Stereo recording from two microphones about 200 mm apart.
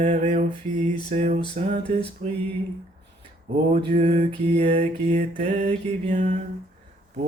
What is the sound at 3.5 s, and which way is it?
Mantra, 30° right (ahead or behind).